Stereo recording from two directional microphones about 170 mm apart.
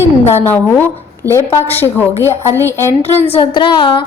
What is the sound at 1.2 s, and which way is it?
Speech, 15° right (ahead or behind).